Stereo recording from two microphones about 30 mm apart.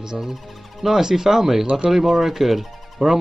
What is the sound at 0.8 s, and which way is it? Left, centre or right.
Speech, centre.